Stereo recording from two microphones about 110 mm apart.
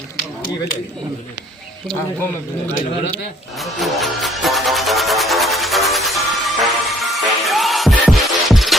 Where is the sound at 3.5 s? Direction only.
Centre (ahead or behind).